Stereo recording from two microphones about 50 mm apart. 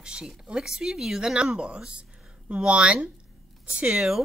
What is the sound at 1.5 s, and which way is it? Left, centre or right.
Speech, right.